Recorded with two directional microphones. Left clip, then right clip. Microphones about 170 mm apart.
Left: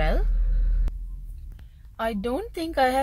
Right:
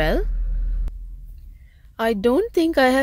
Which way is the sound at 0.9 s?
Centre (ahead or behind).